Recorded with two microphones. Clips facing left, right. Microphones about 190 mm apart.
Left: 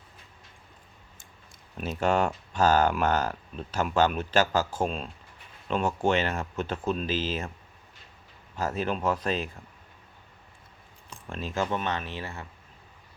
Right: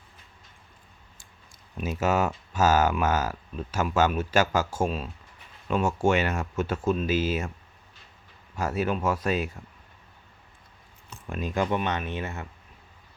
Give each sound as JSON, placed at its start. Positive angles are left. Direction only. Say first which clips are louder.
{"t": 1.7, "sound": "speech", "louder": "even", "side_deg": -5}
{"t": 8.6, "sound": "speech", "louder": "right 1 dB", "side_deg": -10}
{"t": 11.3, "sound": "speech", "louder": "right 3 dB", "side_deg": -15}